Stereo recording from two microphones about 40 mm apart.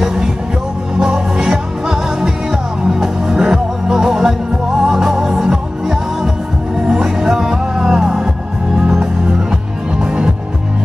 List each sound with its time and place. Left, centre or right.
0.0 s music: centre